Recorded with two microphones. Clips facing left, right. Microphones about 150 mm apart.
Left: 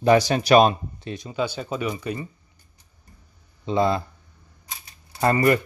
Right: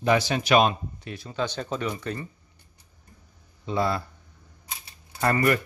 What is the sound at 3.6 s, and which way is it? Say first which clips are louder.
Speech: left 5 dB; 20° left (ahead or behind).